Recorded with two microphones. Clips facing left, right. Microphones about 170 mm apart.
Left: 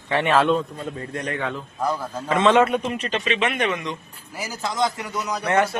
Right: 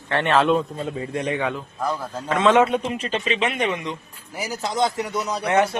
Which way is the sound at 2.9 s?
30° right (ahead or behind).